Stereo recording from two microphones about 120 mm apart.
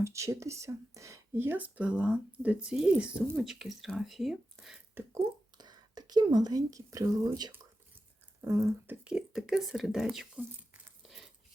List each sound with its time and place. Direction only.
0.0 s speech: 25° right (ahead or behind); by 4.8 s centre (ahead or behind)
4.9 s a sound: 20° right (ahead or behind)
5.5 s speech: 35° right (ahead or behind)
9.0 s speech: 5° right (ahead or behind)
11.0 s coin: 5° right (ahead or behind)